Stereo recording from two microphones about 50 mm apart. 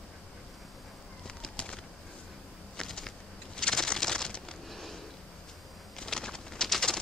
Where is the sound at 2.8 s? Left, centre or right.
Centre.